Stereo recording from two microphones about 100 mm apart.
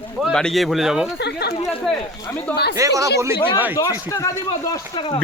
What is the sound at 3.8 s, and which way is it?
Speech, 30° left (ahead or behind).